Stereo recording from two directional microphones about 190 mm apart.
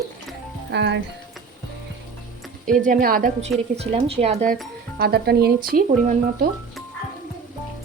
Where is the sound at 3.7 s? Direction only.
30° right (ahead or behind).